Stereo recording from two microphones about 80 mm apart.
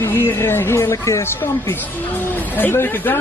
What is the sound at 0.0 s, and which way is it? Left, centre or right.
Speech, left.